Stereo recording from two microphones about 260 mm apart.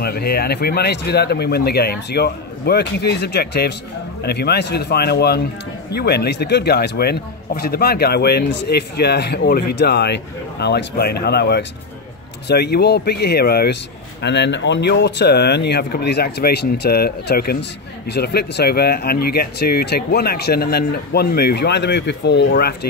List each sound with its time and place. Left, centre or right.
0.0 s speech: left